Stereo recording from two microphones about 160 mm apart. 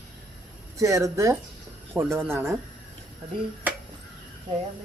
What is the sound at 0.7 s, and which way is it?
Speech, 20° right (ahead or behind).